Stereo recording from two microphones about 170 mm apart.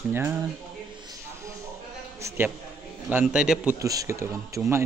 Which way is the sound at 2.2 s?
15° right (ahead or behind).